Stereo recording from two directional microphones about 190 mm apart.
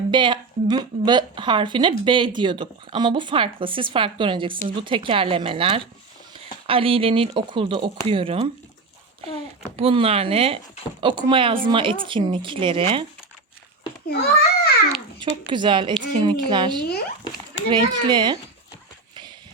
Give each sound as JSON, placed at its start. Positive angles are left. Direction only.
{"t": 0.1, "sound": "speech", "side_deg": -25}
{"t": 9.7, "sound": "speech", "side_deg": -30}
{"t": 14.1, "sound": "a child's voice", "side_deg": 55}
{"t": 15.2, "sound": "speech", "side_deg": -25}